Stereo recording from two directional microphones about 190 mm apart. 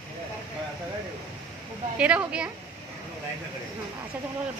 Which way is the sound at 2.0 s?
5° right (ahead or behind).